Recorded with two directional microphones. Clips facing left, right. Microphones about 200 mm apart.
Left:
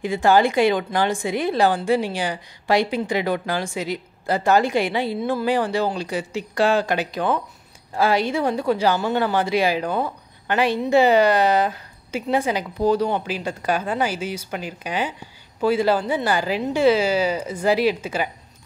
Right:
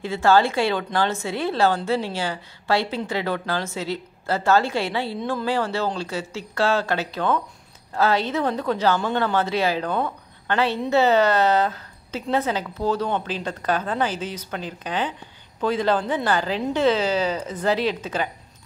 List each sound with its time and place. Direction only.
0.0 s speech: 15° left (ahead or behind)